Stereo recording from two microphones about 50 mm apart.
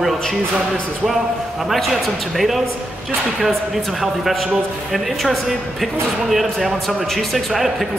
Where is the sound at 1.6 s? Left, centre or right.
Centre.